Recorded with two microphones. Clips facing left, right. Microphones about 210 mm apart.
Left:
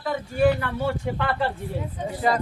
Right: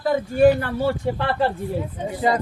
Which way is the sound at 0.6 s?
35° right (ahead or behind).